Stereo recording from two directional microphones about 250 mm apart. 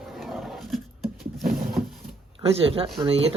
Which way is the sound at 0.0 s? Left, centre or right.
Centre.